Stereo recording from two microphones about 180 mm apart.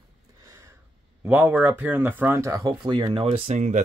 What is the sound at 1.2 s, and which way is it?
Speech, 10° right (ahead or behind).